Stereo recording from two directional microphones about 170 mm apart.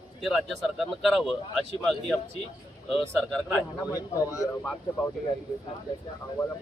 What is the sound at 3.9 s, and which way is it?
Speech, 20° left (ahead or behind).